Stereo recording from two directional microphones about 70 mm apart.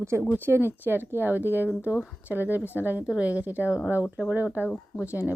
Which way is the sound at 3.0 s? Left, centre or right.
Centre.